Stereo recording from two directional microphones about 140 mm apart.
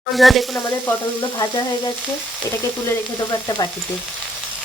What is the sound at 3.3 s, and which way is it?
Speech, 30° left (ahead or behind).